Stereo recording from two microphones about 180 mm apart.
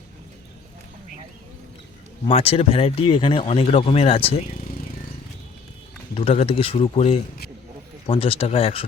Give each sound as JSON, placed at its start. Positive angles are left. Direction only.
{"t": 2.2, "sound": "speech", "side_deg": 30}
{"t": 6.1, "sound": "speech", "side_deg": 35}